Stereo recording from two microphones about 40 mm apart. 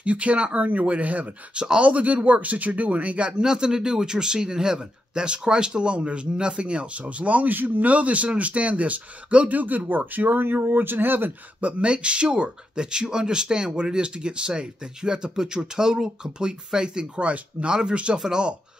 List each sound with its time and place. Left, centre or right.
0.0 s speech: right
1.5 s speech: right
1.8 s speech: right
3.4 s speech: centre; by 7.5 s right
7.5 s speech: right
7.8 s speech: right
11.6 s speech: right